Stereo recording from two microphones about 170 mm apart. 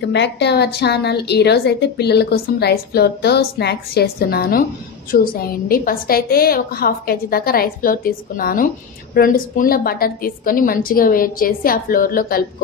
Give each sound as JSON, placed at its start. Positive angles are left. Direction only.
{"t": 0.0, "sound": "a woman's voice", "side_deg": 90}